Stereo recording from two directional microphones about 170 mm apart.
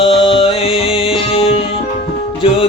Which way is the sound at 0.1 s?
30° left (ahead or behind).